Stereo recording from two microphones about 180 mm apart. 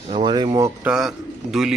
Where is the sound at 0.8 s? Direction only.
Centre (ahead or behind).